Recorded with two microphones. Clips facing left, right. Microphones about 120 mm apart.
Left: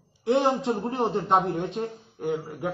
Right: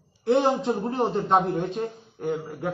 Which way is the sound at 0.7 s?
5° right (ahead or behind).